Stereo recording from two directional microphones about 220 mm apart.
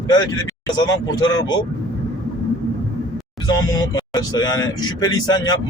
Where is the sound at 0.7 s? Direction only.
20° left (ahead or behind).